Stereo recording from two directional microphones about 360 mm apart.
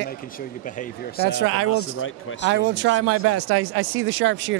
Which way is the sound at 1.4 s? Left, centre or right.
Right.